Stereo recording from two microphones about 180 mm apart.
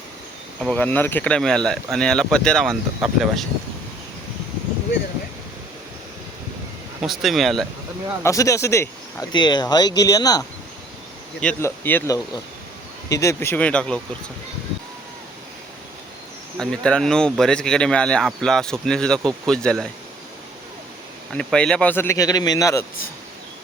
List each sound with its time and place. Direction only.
0.6 s speech: 10° left (ahead or behind)
7.0 s speech: centre (ahead or behind)
8.2 s speech: 15° left (ahead or behind)
11.3 s speech: 10° left (ahead or behind)
16.6 s speech: 5° left (ahead or behind)
21.3 s speech: 5° left (ahead or behind)